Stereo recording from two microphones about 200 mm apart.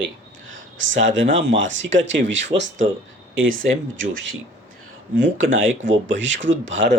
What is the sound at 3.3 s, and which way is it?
Speech, 80° right.